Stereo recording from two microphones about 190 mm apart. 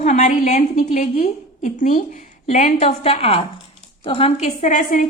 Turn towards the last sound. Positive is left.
turn(degrees=40)  # may be behind; listen again after turning